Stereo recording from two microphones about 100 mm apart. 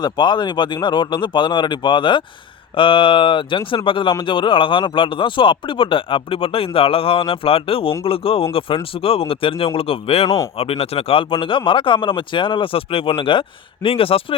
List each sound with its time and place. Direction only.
0.0 s a man's voice: 50° left (ahead or behind); by 10.2 s 75° left (ahead or behind)
10.2 s speech: 35° left (ahead or behind)
10.6 s a man's voice: 75° left (ahead or behind)